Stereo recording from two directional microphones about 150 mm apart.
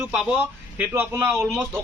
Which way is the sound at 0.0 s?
5° right (ahead or behind).